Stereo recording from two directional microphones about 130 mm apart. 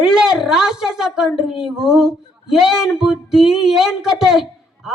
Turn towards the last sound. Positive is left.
turn(degrees=0)  # may be behind; listen again after turning